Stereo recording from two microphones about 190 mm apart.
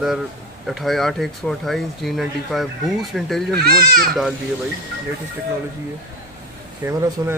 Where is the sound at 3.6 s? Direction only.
50° right (ahead or behind).